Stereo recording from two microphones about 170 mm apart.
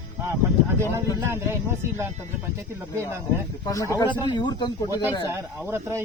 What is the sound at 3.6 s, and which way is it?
Speech, 20° left (ahead or behind).